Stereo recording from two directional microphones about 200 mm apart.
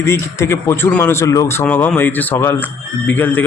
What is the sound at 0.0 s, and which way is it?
Speech, 15° left (ahead or behind).